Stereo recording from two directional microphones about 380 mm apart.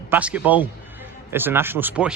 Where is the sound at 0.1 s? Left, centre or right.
Centre.